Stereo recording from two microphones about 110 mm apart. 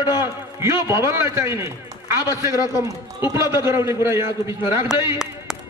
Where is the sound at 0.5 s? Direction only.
25° right (ahead or behind).